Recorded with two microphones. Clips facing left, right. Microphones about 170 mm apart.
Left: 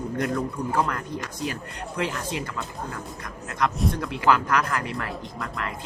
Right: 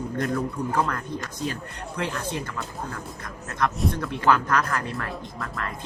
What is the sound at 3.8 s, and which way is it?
Speech, 5° left (ahead or behind).